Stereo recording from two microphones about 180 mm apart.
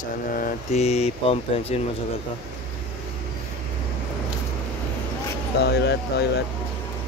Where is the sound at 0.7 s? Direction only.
35° left (ahead or behind).